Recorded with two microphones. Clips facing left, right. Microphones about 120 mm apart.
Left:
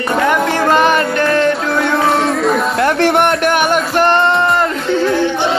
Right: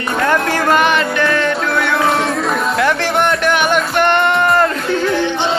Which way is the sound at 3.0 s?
55° left (ahead or behind).